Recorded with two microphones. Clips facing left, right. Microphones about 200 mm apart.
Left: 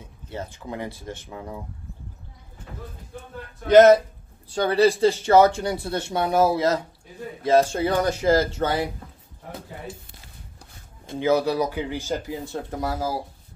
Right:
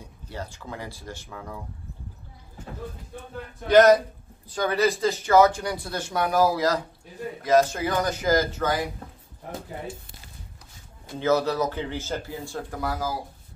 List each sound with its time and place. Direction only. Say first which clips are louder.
0.0 s speech: left 2 dB; 20° left (ahead or behind)
3.6 s speech: left 3 dB; 25° left (ahead or behind)
11.1 s speech: left 2 dB; 15° left (ahead or behind)